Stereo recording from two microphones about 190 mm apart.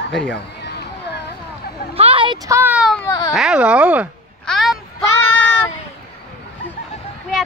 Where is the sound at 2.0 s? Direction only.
30° right (ahead or behind); by 3.1 s centre (ahead or behind).